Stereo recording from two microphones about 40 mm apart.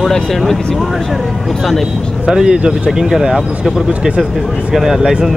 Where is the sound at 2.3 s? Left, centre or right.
Centre.